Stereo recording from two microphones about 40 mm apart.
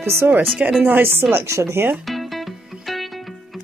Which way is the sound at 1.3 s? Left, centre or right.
Right.